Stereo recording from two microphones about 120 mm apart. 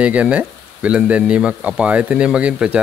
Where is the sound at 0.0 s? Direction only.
10° right (ahead or behind).